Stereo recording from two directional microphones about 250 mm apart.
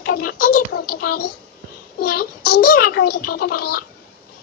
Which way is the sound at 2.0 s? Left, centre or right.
Left.